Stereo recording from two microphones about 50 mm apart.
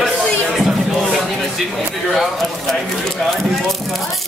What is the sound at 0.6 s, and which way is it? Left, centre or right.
Speech, centre.